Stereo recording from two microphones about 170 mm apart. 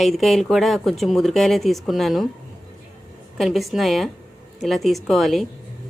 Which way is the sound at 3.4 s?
Centre (ahead or behind).